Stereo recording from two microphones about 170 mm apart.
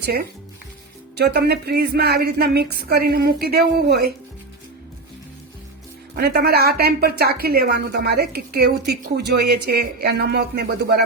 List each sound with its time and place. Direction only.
0.0 s a woman's voice: 65° right (ahead or behind)
6.1 s a woman's voice: 70° right (ahead or behind)